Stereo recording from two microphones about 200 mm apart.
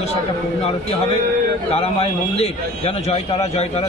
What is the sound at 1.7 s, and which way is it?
A man's voice, 30° left (ahead or behind).